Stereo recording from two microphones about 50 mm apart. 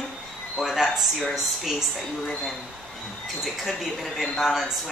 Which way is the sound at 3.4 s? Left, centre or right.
Centre.